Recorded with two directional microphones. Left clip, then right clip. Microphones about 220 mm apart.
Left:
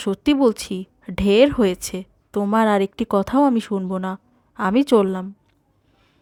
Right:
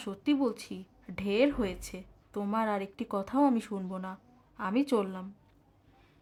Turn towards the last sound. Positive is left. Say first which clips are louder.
# left 13 dB
turn(degrees=40)  # may be behind; listen again after turning